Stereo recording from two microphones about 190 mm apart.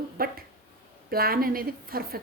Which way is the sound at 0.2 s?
50° right (ahead or behind).